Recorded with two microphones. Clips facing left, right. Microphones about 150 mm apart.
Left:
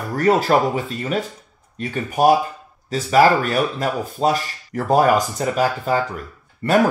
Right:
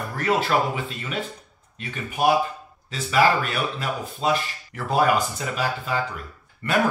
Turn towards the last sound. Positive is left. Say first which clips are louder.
# left 6 dB
turn(degrees=35)  # may be behind; listen again after turning